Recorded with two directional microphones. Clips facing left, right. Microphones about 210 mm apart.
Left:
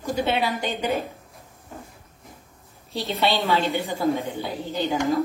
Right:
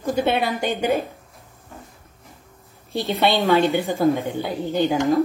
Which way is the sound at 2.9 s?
50° right (ahead or behind).